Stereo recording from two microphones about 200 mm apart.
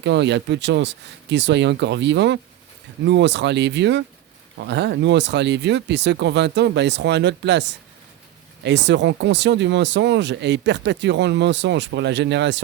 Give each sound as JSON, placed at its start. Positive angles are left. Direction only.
{"t": 0.0, "sound": "speech", "side_deg": -60}